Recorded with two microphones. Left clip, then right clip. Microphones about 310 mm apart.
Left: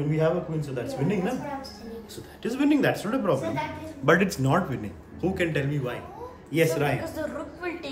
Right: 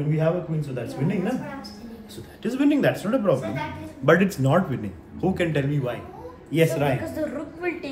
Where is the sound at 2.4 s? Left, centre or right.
Centre.